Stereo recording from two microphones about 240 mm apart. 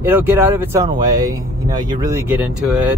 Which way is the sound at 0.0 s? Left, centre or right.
Centre.